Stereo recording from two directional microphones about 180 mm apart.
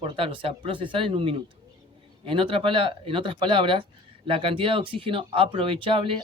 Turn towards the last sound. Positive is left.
turn(degrees=-30)  # may be behind; listen again after turning